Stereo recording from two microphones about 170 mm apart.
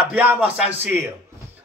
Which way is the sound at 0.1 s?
10° right (ahead or behind).